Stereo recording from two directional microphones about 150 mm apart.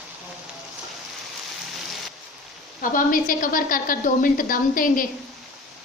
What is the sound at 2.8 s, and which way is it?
A woman's voice, 65° left (ahead or behind).